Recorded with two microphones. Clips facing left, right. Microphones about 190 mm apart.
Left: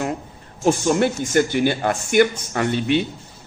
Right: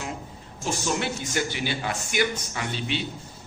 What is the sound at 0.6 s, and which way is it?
A man's voice, 55° left (ahead or behind).